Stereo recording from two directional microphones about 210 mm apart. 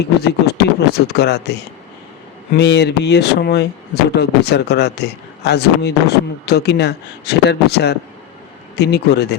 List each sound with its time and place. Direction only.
0.0 s a man's voice: 50° left (ahead or behind)
2.6 s a man's voice: 55° left (ahead or behind)